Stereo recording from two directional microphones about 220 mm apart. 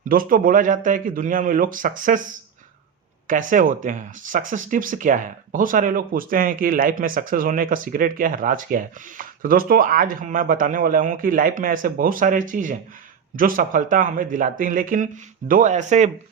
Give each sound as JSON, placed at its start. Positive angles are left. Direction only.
{"t": 0.1, "sound": "speech", "side_deg": -40}
{"t": 3.2, "sound": "speech", "side_deg": -35}